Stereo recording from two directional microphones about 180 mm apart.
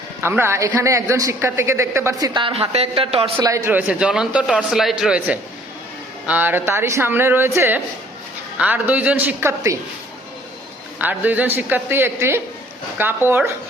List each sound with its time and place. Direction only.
0.2 s a man's voice: 15° right (ahead or behind); by 3.3 s 30° right (ahead or behind)
3.3 s a man's voice: 15° right (ahead or behind)
10.9 s a man's voice: 10° right (ahead or behind)